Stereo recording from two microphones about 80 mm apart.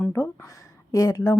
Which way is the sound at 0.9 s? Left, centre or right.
Left.